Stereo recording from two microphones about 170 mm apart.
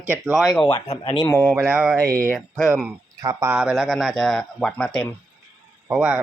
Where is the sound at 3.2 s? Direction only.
20° right (ahead or behind).